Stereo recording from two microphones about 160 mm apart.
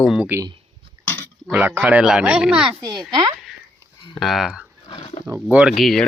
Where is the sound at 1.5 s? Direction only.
10° right (ahead or behind).